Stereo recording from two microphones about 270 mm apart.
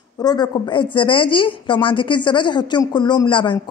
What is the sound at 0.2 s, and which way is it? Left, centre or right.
Speech, centre.